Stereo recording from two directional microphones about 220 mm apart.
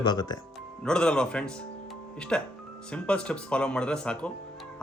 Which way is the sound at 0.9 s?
5° left (ahead or behind).